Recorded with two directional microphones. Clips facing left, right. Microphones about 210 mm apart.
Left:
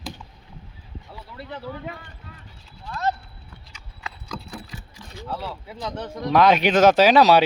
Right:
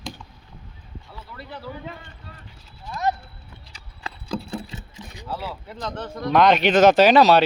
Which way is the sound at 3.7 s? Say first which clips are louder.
Right 2 dB; 30° right (ahead or behind).